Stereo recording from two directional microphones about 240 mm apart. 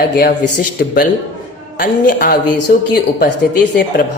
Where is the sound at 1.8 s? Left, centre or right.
Left.